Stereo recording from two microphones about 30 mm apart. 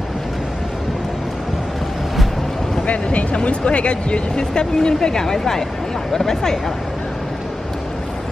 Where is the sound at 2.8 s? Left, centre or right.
Left.